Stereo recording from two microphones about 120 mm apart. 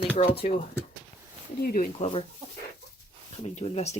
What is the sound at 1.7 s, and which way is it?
Speech, 55° left (ahead or behind).